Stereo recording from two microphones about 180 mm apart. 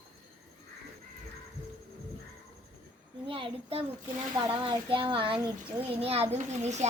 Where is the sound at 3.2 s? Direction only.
30° right (ahead or behind).